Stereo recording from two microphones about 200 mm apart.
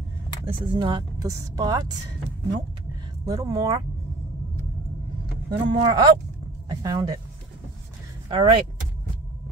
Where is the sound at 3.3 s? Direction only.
15° right (ahead or behind).